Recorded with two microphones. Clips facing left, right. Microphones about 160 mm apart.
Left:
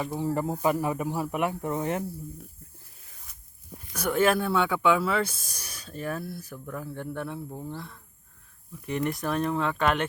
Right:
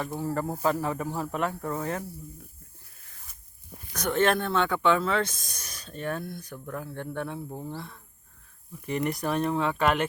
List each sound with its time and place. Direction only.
0.0 s speech: 15° left (ahead or behind)
3.3 s walk: centre (ahead or behind)
3.9 s speech: 10° left (ahead or behind)
7.5 s speech: 10° right (ahead or behind)